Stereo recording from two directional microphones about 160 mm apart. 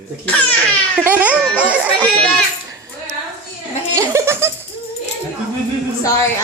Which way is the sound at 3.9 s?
20° right (ahead or behind).